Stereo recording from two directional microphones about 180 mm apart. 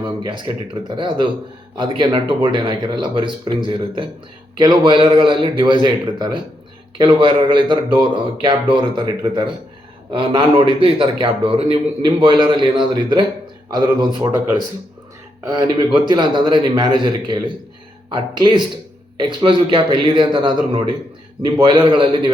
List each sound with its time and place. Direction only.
0.3 s a man's voice: 25° right (ahead or behind)
15.4 s a man's voice: 20° right (ahead or behind)